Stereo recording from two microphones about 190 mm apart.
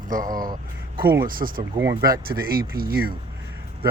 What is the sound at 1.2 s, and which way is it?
Speech, 50° right (ahead or behind).